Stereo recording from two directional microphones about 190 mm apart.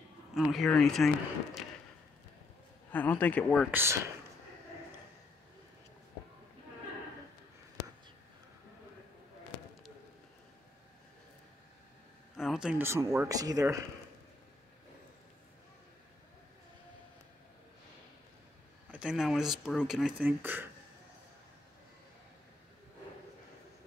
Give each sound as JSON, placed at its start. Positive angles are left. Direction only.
{"t": 0.3, "sound": "speech", "side_deg": 0}
{"t": 2.9, "sound": "speech", "side_deg": 10}
{"t": 3.7, "sound": "speech", "side_deg": -15}
{"t": 12.4, "sound": "speech", "side_deg": 0}
{"t": 18.9, "sound": "speech", "side_deg": -5}